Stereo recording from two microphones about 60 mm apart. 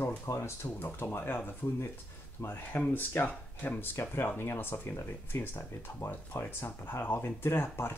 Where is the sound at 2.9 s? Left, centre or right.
Left.